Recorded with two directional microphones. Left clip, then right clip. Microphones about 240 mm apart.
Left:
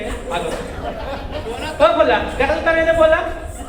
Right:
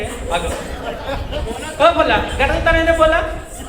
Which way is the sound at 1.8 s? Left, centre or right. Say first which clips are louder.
Right 1 dB; right.